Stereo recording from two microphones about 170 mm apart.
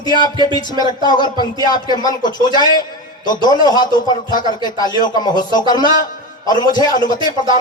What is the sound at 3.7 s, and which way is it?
A man's voice, 25° left (ahead or behind).